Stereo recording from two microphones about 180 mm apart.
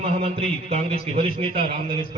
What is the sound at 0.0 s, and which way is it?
A man's voice, 30° right (ahead or behind).